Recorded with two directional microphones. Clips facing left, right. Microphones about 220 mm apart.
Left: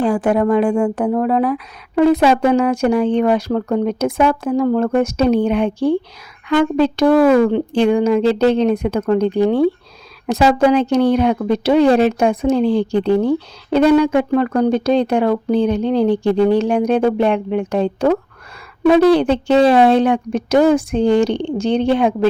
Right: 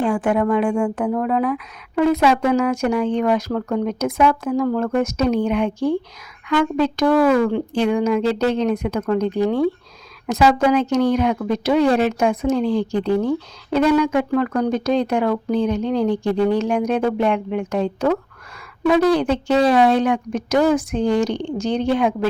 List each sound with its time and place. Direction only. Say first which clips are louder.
0.0 s speech: left 3 dB; 35° left (ahead or behind)